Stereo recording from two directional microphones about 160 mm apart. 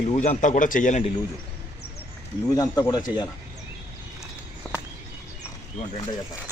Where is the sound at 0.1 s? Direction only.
45° left (ahead or behind).